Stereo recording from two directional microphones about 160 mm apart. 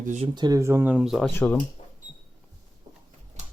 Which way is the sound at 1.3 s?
15° left (ahead or behind).